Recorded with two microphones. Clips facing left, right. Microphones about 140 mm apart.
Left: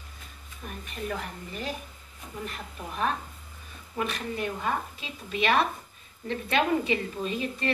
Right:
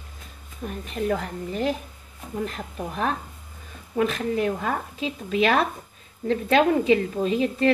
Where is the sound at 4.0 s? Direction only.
90° right.